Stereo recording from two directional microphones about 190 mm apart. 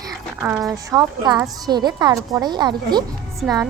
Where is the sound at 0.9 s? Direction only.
20° right (ahead or behind).